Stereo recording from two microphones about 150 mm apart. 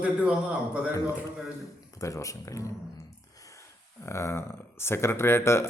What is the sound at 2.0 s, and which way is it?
Speech, 20° left (ahead or behind).